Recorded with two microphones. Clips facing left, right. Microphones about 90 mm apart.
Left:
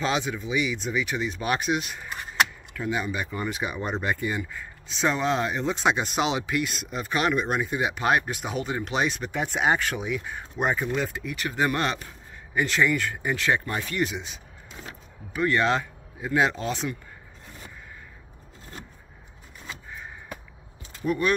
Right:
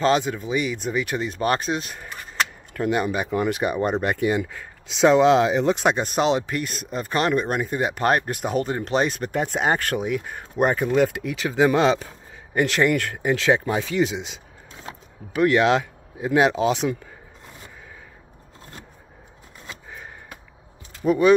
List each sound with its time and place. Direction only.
0.3 s speech: 50° right (ahead or behind)
2.7 s speech: 60° right (ahead or behind)
4.0 s speech: 65° right (ahead or behind)
6.0 s speech: 40° right (ahead or behind)
11.0 s speech: 85° right
12.5 s speech: 65° right (ahead or behind)
21.0 s speech: 35° right (ahead or behind)